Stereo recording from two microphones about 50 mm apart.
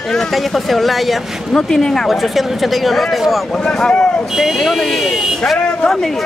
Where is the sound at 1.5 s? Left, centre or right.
Centre.